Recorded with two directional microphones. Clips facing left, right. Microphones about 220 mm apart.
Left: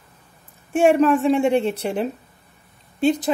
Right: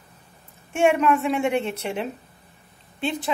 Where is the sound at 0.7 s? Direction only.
35° left (ahead or behind).